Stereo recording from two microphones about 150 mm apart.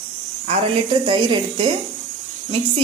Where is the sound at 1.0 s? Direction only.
35° right (ahead or behind).